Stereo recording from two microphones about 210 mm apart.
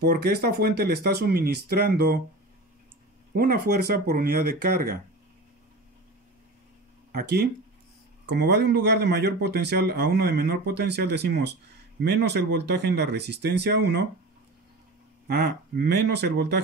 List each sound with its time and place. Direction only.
0.0 s speech: 50° right (ahead or behind)
3.3 s speech: 45° right (ahead or behind)
7.1 s speech: 50° right (ahead or behind)
15.2 s speech: 50° right (ahead or behind)